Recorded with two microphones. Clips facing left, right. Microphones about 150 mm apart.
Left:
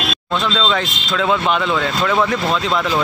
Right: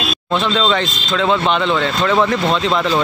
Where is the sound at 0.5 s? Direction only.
5° right (ahead or behind).